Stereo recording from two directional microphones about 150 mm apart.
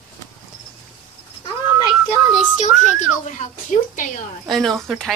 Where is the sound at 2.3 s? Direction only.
55° left (ahead or behind).